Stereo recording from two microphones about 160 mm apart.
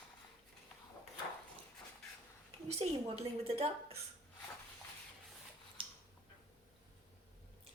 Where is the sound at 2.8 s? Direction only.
40° right (ahead or behind).